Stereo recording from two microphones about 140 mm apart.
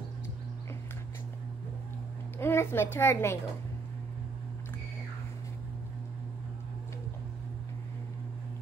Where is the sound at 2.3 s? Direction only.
15° left (ahead or behind).